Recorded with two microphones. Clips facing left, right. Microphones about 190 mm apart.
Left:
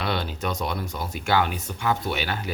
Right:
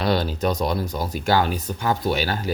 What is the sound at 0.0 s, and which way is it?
Speech, 35° right (ahead or behind).